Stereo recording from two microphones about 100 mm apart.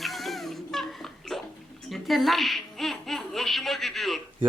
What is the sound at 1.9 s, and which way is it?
Baby laughter, centre (ahead or behind).